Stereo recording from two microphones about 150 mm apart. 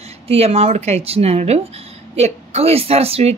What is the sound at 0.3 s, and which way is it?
A woman's voice, 40° right (ahead or behind).